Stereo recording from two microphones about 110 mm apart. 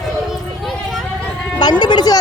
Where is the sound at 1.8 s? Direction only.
40° left (ahead or behind).